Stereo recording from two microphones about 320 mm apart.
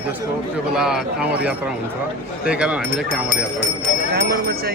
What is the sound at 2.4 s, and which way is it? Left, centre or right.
Speech, centre.